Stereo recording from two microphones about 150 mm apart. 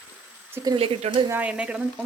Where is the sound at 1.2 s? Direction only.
10° right (ahead or behind).